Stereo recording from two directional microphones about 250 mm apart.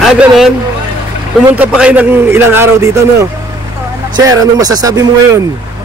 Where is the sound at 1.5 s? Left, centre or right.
Centre.